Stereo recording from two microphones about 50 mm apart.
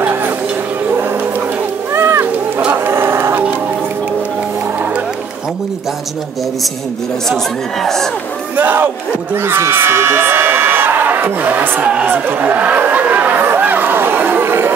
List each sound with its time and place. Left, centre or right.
0.0 s a sound: right
2.0 s cat: right
2.7 s livestock: right
7.8 s speech: centre
8.5 s speech: right
11.8 s speech: right
12.1 s speech: right
13.6 s chatter: right